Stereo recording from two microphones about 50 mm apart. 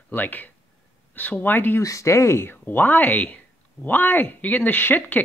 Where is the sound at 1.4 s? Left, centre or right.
Left.